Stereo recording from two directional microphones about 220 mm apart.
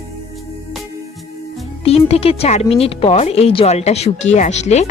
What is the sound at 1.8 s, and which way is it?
Speech, 25° left (ahead or behind).